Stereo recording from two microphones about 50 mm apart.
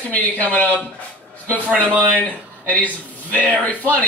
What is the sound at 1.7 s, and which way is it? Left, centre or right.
Speech, right.